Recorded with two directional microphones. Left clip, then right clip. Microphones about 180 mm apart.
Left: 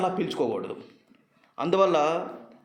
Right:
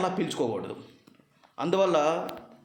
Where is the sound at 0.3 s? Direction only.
Centre (ahead or behind).